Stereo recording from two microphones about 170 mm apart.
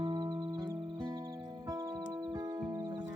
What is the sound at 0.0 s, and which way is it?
Music, 25° right (ahead or behind).